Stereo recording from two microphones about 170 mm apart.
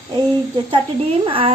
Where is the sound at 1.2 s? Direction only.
30° right (ahead or behind).